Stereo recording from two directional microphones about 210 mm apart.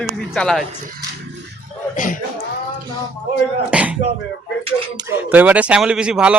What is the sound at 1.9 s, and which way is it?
Speech, 40° left (ahead or behind).